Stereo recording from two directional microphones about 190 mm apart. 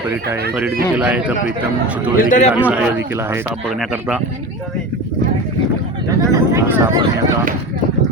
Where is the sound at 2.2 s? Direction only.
40° left (ahead or behind).